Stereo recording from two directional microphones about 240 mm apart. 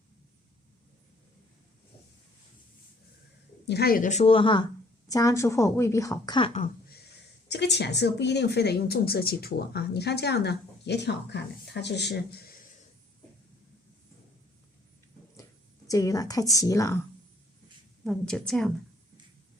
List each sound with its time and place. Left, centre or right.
3.7 s speech: left
15.9 s a woman's voice: centre
18.0 s a woman's voice: centre